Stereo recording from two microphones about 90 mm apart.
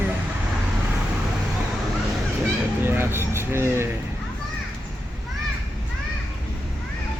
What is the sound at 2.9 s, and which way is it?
Speech, 25° right (ahead or behind).